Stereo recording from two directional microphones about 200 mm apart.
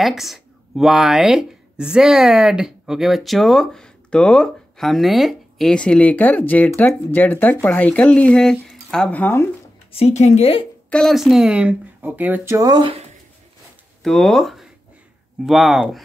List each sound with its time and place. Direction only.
0.0 s speech: centre (ahead or behind)
9.9 s speech: 35° left (ahead or behind)
10.9 s speech: centre (ahead or behind); by 13.0 s 25° right (ahead or behind)
14.0 s speech: centre (ahead or behind)